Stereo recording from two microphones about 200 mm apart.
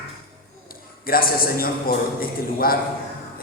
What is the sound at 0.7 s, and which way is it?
A man's voice, 45° left (ahead or behind).